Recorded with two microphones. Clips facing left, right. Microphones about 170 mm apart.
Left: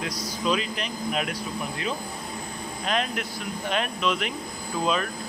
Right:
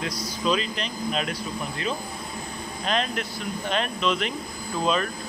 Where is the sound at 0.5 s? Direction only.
10° left (ahead or behind).